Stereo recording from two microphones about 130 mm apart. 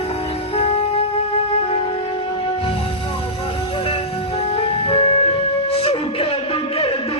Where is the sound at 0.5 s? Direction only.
50° left (ahead or behind).